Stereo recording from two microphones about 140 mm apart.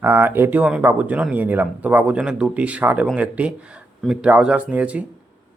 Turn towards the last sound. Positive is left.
turn(degrees=-10)  # may be behind; listen again after turning